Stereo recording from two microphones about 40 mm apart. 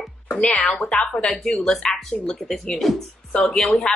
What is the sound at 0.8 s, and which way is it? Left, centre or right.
A woman's voice, centre.